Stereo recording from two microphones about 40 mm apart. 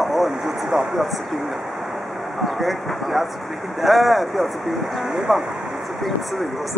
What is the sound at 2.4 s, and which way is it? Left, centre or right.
Speech, centre.